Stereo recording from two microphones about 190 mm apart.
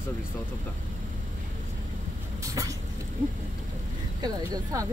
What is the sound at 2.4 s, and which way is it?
Vehicle, 15° right (ahead or behind).